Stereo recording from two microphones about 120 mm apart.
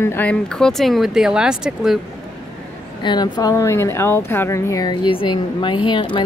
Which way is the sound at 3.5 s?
20° left (ahead or behind).